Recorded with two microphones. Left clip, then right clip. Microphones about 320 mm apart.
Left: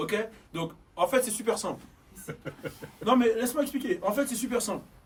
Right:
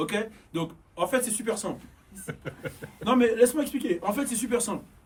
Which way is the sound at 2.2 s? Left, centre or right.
Right.